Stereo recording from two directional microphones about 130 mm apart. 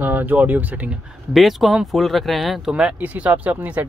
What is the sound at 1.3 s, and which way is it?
Speech, centre (ahead or behind).